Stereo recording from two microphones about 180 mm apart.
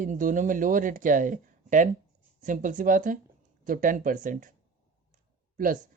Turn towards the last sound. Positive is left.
turn(degrees=-50)  # may be behind; listen again after turning